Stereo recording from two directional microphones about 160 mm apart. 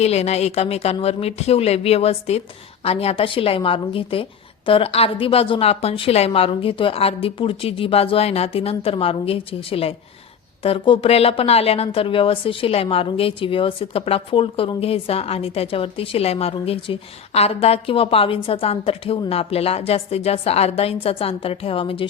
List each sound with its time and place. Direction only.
0.0 s a woman's voice: 40° left (ahead or behind)